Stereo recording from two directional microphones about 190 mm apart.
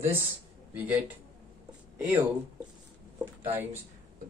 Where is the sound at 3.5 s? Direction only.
10° right (ahead or behind).